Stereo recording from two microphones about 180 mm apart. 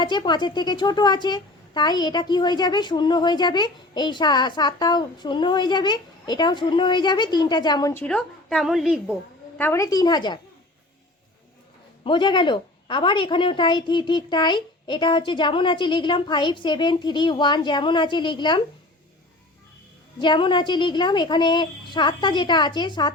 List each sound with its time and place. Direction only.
0.0 s a woman's voice: 25° left (ahead or behind)
8.0 s a woman's voice: 5° left (ahead or behind)
9.6 s a woman's voice: 15° left (ahead or behind)
12.0 s a woman's voice: 25° left (ahead or behind)
20.1 s a woman's voice: 25° left (ahead or behind)